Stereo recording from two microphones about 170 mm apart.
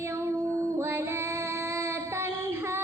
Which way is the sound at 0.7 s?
15° right (ahead or behind).